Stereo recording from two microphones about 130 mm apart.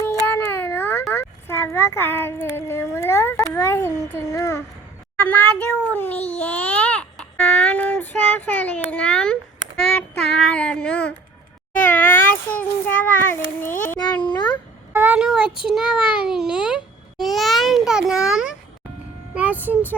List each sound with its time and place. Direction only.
0.0 s baby cry: 20° left (ahead or behind)
1.1 s a child's voice: 20° left (ahead or behind)
4.2 s child singing: 25° left (ahead or behind)
5.1 s a child's voice: 10° left (ahead or behind)
11.9 s child singing: 15° left (ahead or behind)
13.7 s a child's voice: 90° left
14.0 s a child's voice: 35° left (ahead or behind)
14.9 s a sound: 10° right (ahead or behind)
15.7 s a child's voice: 5° right (ahead or behind)